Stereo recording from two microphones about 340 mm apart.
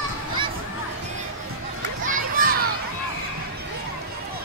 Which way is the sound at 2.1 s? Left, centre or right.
Right.